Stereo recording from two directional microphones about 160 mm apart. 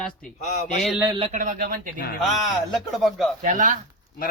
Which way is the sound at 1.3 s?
55° right (ahead or behind).